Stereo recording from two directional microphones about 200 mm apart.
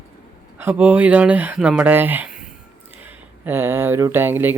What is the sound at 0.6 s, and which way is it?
Speech, 10° right (ahead or behind).